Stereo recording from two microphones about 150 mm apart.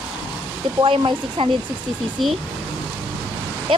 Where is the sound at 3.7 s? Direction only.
35° right (ahead or behind).